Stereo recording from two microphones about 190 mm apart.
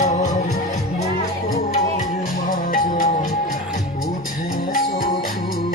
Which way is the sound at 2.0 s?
45° left (ahead or behind).